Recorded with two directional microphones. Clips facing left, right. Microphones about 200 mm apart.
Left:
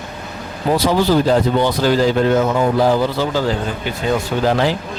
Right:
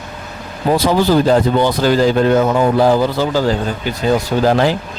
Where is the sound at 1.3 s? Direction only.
45° right (ahead or behind).